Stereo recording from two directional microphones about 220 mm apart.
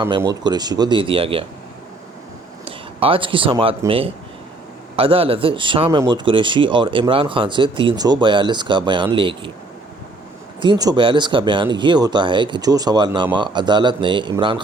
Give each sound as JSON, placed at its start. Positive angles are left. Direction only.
{"t": 0.2, "sound": "a man's voice", "side_deg": -20}
{"t": 2.6, "sound": "a man's voice", "side_deg": -25}
{"t": 10.6, "sound": "a man's voice", "side_deg": -20}